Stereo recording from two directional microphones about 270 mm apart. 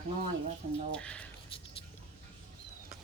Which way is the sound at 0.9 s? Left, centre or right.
Centre.